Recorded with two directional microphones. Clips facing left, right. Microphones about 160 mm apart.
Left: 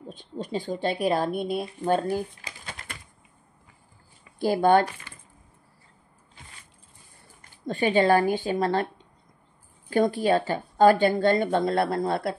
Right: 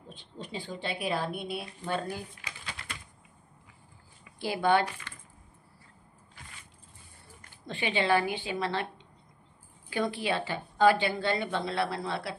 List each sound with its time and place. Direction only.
0.1 s speech: 45° left (ahead or behind)
4.4 s speech: 45° left (ahead or behind)
5.1 s a sound: 10° left (ahead or behind)
7.6 s speech: 45° left (ahead or behind)